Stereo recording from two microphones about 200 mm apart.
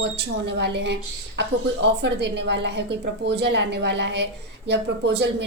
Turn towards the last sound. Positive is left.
turn(degrees=-60)  # may be behind; listen again after turning